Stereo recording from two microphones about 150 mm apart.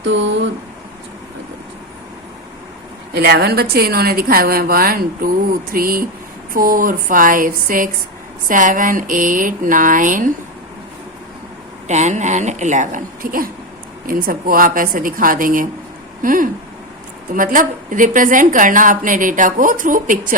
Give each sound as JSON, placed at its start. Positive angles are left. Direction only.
{"t": 3.2, "sound": "a woman's voice", "side_deg": -90}
{"t": 11.9, "sound": "a woman's voice", "side_deg": -50}